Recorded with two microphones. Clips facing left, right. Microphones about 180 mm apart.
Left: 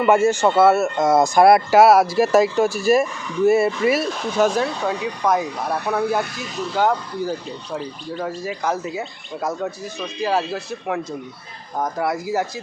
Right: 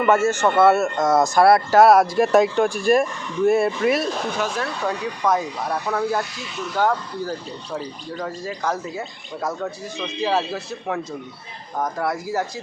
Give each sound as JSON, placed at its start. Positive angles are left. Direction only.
{"t": 0.0, "sound": "speech", "side_deg": 10}
{"t": 4.4, "sound": "speech", "side_deg": 40}
{"t": 4.6, "sound": "speech", "side_deg": 10}
{"t": 6.4, "sound": "speech", "side_deg": 35}
{"t": 6.7, "sound": "speech", "side_deg": 10}